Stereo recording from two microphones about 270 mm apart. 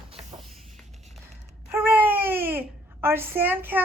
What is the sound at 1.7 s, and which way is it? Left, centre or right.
Babbling, centre.